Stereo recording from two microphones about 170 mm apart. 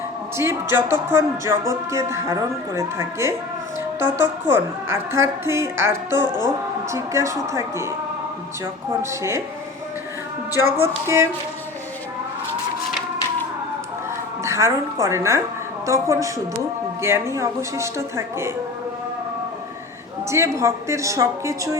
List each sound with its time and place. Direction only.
0.3 s a woman's voice: 15° right (ahead or behind)
6.2 s speech: 25° left (ahead or behind)
6.9 s a woman's voice: 15° right (ahead or behind)
9.0 s a woman's voice: 15° right (ahead or behind)
10.7 s a woman's voice: 15° right (ahead or behind)
14.4 s a woman's voice: 15° right (ahead or behind)
20.3 s a woman's voice: 15° right (ahead or behind)